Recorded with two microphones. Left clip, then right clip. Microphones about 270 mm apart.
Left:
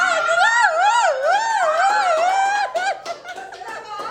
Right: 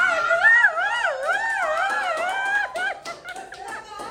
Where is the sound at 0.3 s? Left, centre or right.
Centre.